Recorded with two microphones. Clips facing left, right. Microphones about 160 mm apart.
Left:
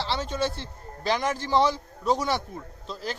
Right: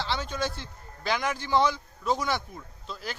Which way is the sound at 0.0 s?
30° left (ahead or behind).